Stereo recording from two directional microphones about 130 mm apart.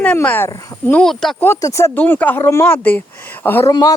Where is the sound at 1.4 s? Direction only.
20° left (ahead or behind).